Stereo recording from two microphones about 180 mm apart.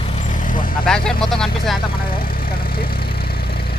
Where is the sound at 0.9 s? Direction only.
5° left (ahead or behind).